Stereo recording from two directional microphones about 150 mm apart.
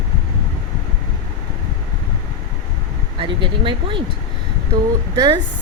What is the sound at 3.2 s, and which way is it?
Speech, 35° right (ahead or behind).